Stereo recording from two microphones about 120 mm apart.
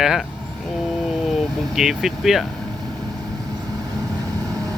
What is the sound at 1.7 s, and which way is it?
Speech, 5° right (ahead or behind).